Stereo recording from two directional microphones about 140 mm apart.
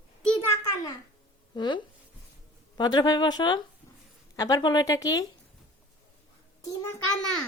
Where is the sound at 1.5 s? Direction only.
30° left (ahead or behind).